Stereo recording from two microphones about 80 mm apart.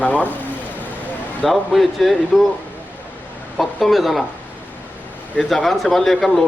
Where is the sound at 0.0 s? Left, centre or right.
Centre.